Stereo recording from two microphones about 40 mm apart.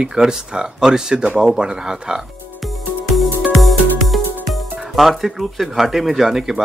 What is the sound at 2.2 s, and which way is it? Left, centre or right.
Speech, centre.